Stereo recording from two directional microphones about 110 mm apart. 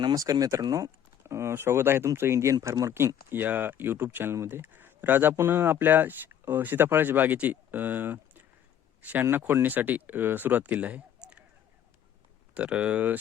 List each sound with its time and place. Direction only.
0.0 s speech: 35° right (ahead or behind); by 8.4 s 15° right (ahead or behind)
9.0 s a sound: 15° right (ahead or behind)
9.2 s speech: 20° right (ahead or behind)
12.5 s speech: 15° right (ahead or behind)